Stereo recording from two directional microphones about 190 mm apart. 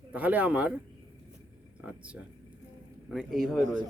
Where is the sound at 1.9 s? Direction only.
5° right (ahead or behind).